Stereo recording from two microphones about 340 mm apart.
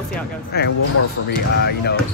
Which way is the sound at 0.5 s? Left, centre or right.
Left.